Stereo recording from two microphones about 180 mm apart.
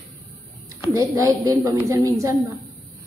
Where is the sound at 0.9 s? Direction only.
20° right (ahead or behind).